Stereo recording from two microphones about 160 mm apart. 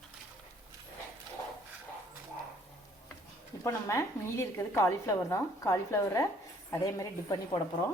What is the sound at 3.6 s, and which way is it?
A woman's voice, 20° left (ahead or behind).